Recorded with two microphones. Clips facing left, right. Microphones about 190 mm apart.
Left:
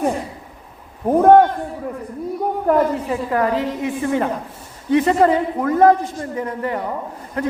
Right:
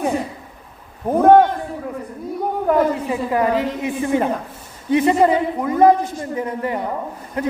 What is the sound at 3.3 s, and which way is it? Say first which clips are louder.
A woman's voice: right 1 dB; 15° right (ahead or behind).